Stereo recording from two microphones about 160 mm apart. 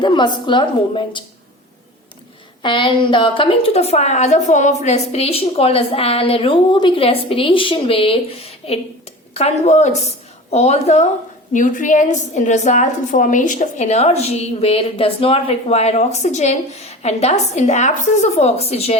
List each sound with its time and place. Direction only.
0.0 s a woman's voice: 30° left (ahead or behind)
2.6 s a woman's voice: 30° left (ahead or behind)
11.5 s a woman's voice: 55° left (ahead or behind)